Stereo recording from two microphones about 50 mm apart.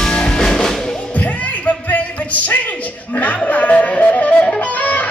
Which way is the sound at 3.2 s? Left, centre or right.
Left.